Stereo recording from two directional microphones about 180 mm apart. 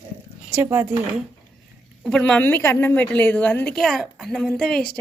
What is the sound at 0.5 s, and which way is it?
Speech, 10° right (ahead or behind).